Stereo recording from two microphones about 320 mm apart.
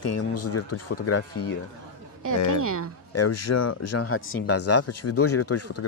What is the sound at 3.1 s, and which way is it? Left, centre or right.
A man's voice, left.